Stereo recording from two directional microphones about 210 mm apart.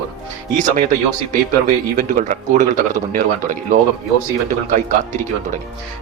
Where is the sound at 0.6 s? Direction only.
35° right (ahead or behind).